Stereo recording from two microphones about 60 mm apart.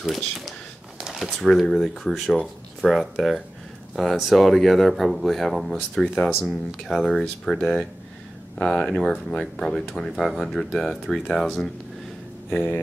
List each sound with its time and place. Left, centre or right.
0.0 s speech: centre
1.0 s a sound: centre
1.4 s speech: centre
6.8 s speech: centre
12.4 s speech: left